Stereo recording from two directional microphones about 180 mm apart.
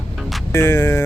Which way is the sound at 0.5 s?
15° left (ahead or behind).